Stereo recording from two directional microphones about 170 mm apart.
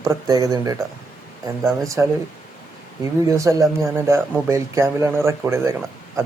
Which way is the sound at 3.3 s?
20° right (ahead or behind).